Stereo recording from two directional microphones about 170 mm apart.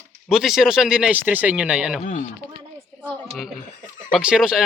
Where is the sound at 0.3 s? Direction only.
Centre (ahead or behind).